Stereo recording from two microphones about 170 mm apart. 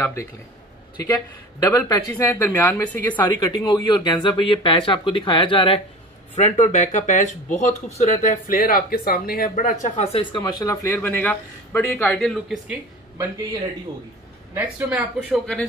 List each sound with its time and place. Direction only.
0.0 s speech: 15° left (ahead or behind)
3.2 s speech: 25° left (ahead or behind)
6.3 s speech: 40° left (ahead or behind)
10.3 s speech: 25° left (ahead or behind); by 12.7 s centre (ahead or behind)
14.5 s a woman's voice: 10° right (ahead or behind)
15.1 s speech: 5° left (ahead or behind)